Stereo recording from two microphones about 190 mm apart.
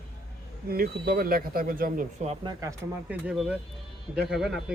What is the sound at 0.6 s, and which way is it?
Speech, 50° right (ahead or behind).